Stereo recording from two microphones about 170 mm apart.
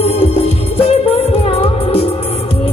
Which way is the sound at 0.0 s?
35° left (ahead or behind).